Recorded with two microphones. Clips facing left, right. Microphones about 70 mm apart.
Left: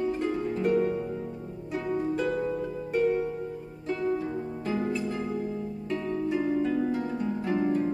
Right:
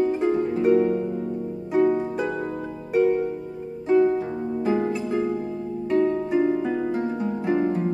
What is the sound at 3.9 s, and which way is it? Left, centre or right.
Harp, right.